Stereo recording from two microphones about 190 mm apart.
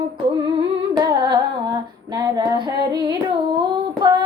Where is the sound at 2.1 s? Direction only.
20° right (ahead or behind).